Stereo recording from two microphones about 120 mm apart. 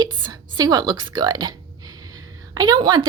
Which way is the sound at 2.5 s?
35° right (ahead or behind).